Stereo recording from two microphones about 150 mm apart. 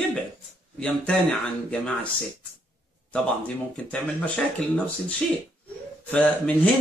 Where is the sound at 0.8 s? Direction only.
10° left (ahead or behind).